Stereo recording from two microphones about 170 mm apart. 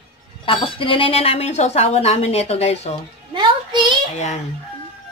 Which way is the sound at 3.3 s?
25° right (ahead or behind).